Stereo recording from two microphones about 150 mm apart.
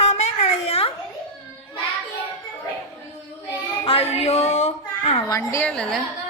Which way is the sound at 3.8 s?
40° left (ahead or behind).